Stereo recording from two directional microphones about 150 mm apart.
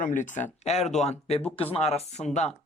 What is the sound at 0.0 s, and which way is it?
Speech, 60° left (ahead or behind).